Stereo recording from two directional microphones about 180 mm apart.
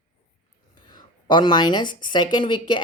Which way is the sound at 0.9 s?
25° left (ahead or behind).